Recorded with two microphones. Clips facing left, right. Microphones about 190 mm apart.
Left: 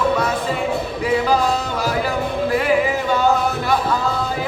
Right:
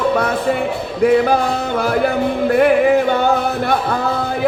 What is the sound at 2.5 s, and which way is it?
Music, 55° right (ahead or behind).